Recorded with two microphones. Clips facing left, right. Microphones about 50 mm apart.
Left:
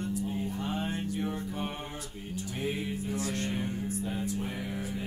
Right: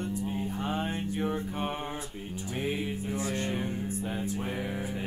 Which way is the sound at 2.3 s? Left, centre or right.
Centre.